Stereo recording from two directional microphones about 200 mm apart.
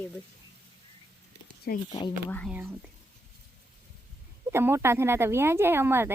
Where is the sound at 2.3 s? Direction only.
5° left (ahead or behind).